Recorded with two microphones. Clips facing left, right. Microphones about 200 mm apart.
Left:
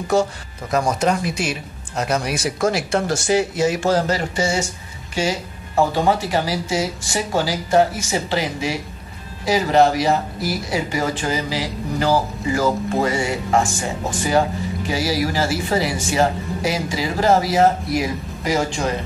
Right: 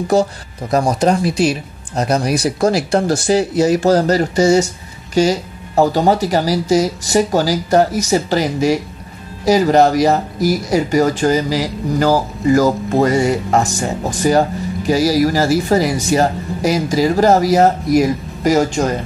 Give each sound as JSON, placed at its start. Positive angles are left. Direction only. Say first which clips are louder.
{"t": 0.1, "sound": "speech", "louder": "right 3 dB", "side_deg": -35}